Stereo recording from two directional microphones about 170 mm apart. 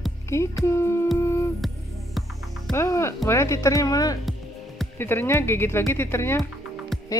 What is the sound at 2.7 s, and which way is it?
Speech, 15° left (ahead or behind).